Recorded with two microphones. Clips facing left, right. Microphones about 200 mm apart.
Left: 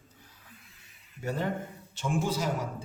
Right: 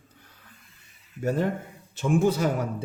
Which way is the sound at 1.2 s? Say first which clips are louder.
Right 6 dB; 45° right (ahead or behind).